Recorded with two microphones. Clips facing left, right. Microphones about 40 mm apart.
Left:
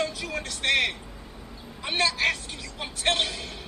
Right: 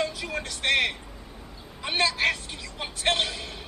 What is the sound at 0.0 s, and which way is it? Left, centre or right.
A woman's voice, centre.